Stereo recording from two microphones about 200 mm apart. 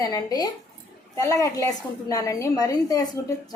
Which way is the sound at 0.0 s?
20° left (ahead or behind).